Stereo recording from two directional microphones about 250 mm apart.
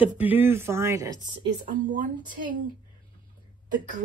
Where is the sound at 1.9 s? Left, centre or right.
Right.